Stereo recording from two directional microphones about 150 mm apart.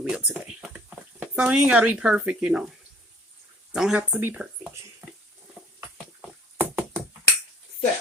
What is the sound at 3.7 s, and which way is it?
Speech, 5° right (ahead or behind).